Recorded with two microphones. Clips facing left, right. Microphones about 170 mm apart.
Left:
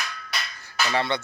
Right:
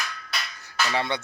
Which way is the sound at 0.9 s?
10° right (ahead or behind).